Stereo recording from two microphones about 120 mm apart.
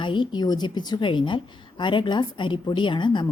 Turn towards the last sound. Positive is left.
turn(degrees=40)  # may be behind; listen again after turning